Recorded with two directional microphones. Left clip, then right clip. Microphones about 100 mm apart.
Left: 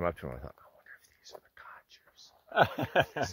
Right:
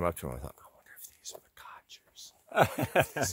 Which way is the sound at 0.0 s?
20° right (ahead or behind).